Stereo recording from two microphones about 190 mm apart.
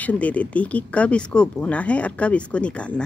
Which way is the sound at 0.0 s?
10° left (ahead or behind).